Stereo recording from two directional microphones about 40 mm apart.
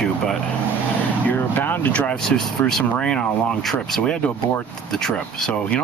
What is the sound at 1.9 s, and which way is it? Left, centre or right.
Speech, left.